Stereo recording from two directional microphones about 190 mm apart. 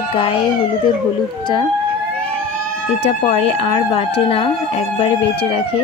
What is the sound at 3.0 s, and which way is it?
Speech, 30° left (ahead or behind).